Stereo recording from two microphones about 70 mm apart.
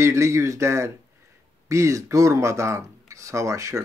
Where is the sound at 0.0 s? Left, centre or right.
Right.